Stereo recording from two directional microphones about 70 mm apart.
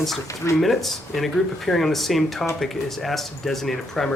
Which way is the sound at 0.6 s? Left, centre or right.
Centre.